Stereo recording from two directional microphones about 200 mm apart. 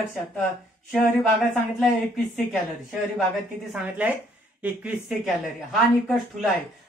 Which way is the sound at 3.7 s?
5° right (ahead or behind).